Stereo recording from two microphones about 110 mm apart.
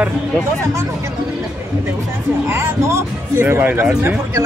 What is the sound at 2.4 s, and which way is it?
Speech, 25° right (ahead or behind).